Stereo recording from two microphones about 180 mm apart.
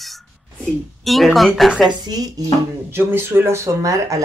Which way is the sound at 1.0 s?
Centre (ahead or behind).